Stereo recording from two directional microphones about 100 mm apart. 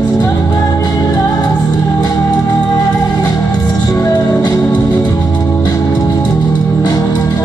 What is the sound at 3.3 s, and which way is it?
Music, 35° left (ahead or behind).